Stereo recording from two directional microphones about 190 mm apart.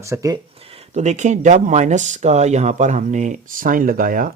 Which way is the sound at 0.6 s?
30° right (ahead or behind).